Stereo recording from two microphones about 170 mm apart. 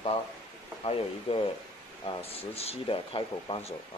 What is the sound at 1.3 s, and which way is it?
Speech, 35° left (ahead or behind).